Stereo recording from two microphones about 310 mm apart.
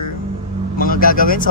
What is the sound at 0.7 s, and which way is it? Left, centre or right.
Speech, left.